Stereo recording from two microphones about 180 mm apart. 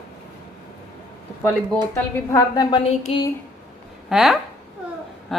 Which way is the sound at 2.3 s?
20° left (ahead or behind).